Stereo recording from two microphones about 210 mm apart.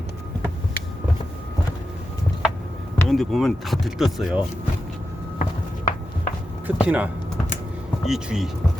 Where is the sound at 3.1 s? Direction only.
Centre (ahead or behind).